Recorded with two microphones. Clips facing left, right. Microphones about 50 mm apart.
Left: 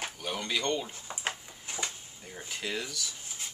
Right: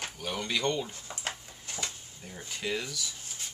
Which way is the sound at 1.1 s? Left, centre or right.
Centre.